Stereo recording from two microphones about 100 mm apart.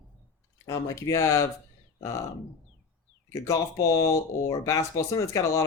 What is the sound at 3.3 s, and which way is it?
Speech, 30° left (ahead or behind).